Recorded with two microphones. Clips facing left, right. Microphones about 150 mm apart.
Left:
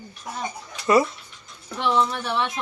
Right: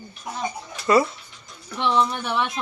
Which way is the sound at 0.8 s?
20° left (ahead or behind).